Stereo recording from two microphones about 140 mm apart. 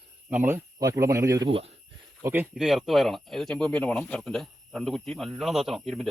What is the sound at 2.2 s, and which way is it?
Speech, 15° right (ahead or behind).